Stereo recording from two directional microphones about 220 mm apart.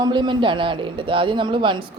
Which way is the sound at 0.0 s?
20° right (ahead or behind).